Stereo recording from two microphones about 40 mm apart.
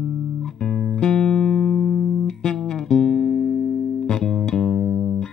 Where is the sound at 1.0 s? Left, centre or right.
Centre.